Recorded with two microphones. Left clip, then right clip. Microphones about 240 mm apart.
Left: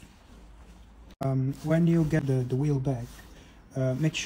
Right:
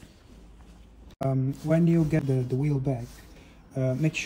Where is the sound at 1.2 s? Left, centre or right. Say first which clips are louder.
Right 2 dB; centre.